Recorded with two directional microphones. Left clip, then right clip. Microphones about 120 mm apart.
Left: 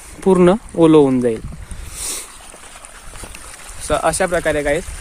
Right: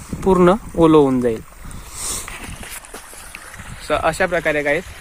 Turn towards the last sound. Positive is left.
turn(degrees=15)  # may be behind; listen again after turning